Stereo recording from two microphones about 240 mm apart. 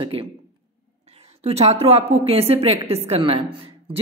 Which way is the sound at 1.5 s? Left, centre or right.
Right.